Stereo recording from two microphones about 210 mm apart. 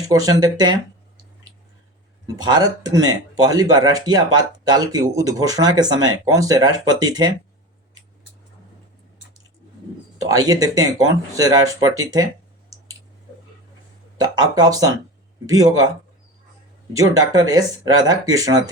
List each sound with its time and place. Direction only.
0.1 s speech: 15° right (ahead or behind)
2.2 s speech: 20° right (ahead or behind)
10.2 s speech: 15° right (ahead or behind)
14.2 s speech: 20° right (ahead or behind)
16.9 s speech: 15° right (ahead or behind)